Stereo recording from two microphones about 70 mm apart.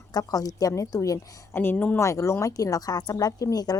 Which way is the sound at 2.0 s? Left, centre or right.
Left.